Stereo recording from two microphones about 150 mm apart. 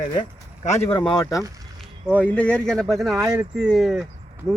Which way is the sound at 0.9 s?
30° left (ahead or behind).